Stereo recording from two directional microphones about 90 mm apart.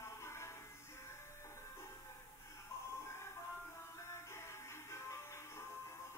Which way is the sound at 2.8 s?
30° left (ahead or behind).